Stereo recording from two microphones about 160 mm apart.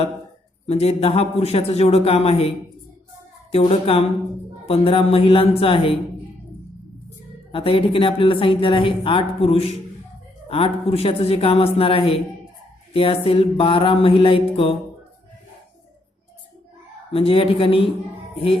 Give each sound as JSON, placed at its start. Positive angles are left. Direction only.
{"t": 0.7, "sound": "a woman's voice", "side_deg": 40}
{"t": 7.5, "sound": "a woman's voice", "side_deg": 35}
{"t": 17.1, "sound": "a woman's voice", "side_deg": 35}